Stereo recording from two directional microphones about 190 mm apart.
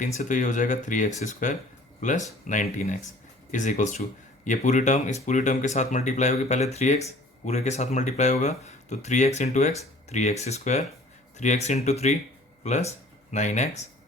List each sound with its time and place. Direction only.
0.0 s speech: 40° left (ahead or behind)